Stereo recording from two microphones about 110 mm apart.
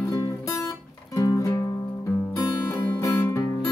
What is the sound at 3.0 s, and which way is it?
Music, 20° left (ahead or behind).